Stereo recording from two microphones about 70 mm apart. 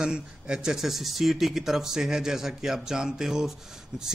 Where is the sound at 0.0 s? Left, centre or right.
Centre.